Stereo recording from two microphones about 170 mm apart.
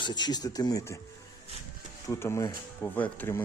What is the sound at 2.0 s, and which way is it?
Speech, 15° left (ahead or behind).